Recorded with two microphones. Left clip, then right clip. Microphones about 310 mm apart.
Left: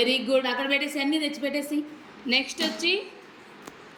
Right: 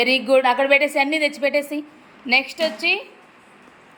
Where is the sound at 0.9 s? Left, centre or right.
Right.